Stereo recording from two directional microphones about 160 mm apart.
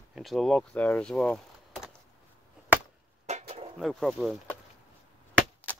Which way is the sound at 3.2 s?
45° right (ahead or behind).